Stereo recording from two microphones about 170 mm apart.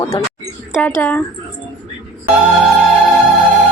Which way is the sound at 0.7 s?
10° left (ahead or behind).